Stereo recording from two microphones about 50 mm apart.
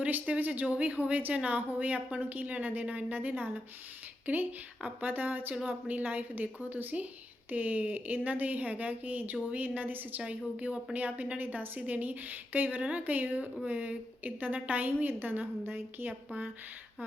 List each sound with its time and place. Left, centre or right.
0.0 s speech: right
10.2 s a woman's voice: right